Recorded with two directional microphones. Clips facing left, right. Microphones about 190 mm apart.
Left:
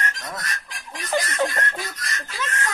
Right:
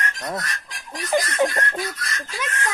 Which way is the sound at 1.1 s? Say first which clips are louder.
Right 3 dB; 15° right (ahead or behind).